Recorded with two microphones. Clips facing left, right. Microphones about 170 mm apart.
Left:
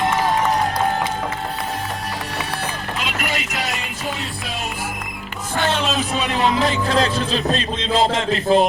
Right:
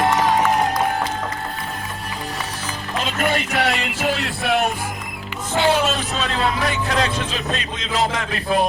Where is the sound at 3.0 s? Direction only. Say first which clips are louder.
Right 6 dB; 50° right (ahead or behind); by 4.7 s 65° right (ahead or behind).